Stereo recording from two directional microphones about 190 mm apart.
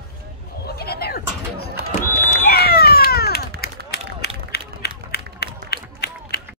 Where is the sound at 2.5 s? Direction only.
55° left (ahead or behind).